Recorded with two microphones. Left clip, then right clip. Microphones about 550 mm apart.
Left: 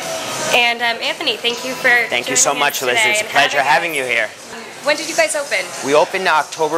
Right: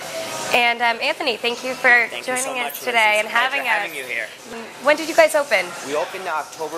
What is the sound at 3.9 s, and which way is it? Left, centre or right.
Speech, left.